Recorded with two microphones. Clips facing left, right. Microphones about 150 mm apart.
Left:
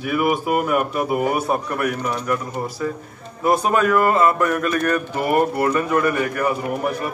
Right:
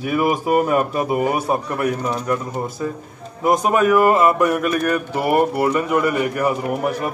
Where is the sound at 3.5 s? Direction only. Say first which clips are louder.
Right 2 dB; 15° right (ahead or behind).